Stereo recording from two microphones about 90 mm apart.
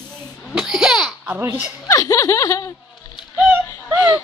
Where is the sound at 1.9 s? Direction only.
35° left (ahead or behind).